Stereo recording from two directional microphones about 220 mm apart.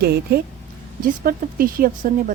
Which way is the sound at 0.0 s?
45° right (ahead or behind).